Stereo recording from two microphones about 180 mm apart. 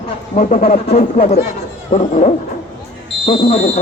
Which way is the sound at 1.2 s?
35° left (ahead or behind).